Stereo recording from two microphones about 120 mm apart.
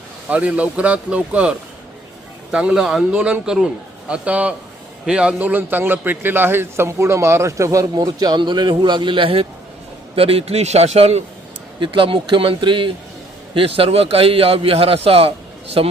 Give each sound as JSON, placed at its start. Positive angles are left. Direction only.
{"t": 0.3, "sound": "a man's voice", "side_deg": -10}
{"t": 11.8, "sound": "a man's voice", "side_deg": -45}